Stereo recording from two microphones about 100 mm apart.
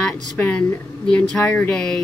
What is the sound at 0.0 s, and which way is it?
A woman's voice, 15° left (ahead or behind).